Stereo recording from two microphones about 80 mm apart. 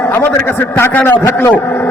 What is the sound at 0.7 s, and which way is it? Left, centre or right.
Speech, left.